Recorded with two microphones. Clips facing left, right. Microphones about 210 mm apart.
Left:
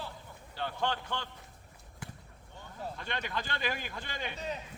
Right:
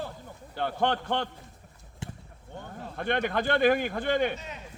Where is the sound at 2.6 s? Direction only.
55° right (ahead or behind).